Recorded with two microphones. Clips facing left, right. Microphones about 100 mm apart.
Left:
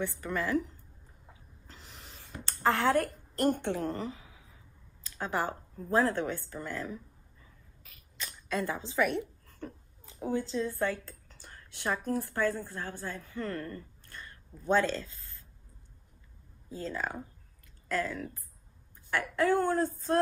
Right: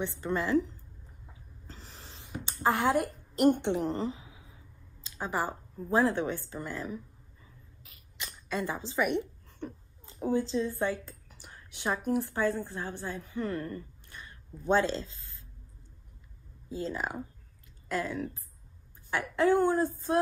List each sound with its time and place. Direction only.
0.0 s a woman's voice: 25° right (ahead or behind)
1.7 s snort: 35° right (ahead or behind)
2.2 s a woman's voice: 10° right (ahead or behind)
5.1 s a woman's voice: 5° right (ahead or behind)
8.5 s a woman's voice: 5° right (ahead or behind)
8.9 s a woman's voice: 15° right (ahead or behind)
10.9 s a woman's voice: 10° right (ahead or behind)
16.7 s a woman's voice: 15° right (ahead or behind)